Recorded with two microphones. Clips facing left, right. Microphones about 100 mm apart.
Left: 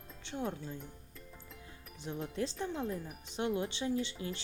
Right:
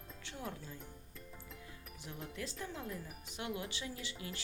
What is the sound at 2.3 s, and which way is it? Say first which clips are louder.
Speech: left 8 dB; 30° left (ahead or behind).